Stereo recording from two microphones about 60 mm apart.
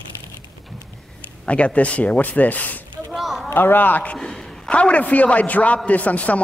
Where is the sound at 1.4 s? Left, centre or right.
Left.